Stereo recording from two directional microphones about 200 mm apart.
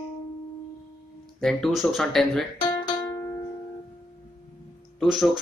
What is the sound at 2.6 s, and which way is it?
Music, 20° left (ahead or behind).